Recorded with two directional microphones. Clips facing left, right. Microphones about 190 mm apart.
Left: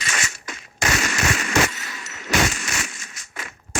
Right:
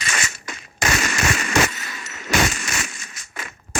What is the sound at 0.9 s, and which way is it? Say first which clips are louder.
Fireworks: even; 50° right (ahead or behind).